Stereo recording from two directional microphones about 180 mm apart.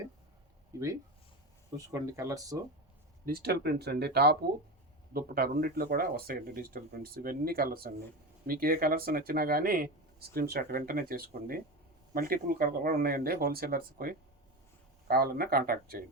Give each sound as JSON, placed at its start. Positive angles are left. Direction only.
{"t": 0.7, "sound": "speech", "side_deg": -20}
{"t": 1.9, "sound": "speech", "side_deg": -20}
{"t": 3.2, "sound": "speech", "side_deg": -60}